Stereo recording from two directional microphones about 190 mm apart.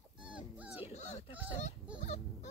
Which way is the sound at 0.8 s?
35° left (ahead or behind).